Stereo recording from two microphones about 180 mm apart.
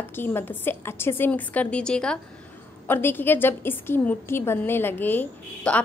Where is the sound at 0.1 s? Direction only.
10° left (ahead or behind).